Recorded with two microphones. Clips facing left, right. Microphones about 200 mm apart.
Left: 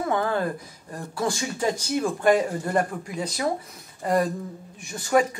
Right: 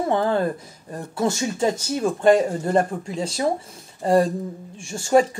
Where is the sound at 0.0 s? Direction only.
25° right (ahead or behind).